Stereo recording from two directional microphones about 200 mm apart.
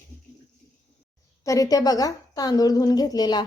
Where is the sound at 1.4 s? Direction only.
15° left (ahead or behind).